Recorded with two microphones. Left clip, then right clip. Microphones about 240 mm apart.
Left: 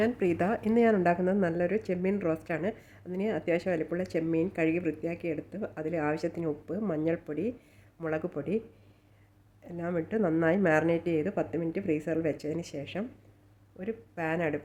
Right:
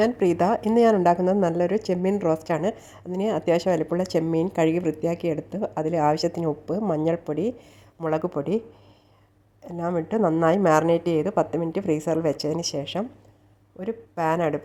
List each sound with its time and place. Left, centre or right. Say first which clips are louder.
0.0 s a woman's voice: right 7 dB; centre
9.6 s a woman's voice: right 7 dB; centre